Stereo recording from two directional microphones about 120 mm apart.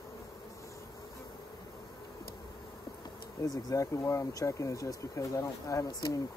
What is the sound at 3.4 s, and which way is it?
Speech, 30° left (ahead or behind).